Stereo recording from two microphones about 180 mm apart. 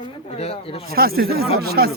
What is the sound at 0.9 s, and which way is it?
Speech, 55° right (ahead or behind).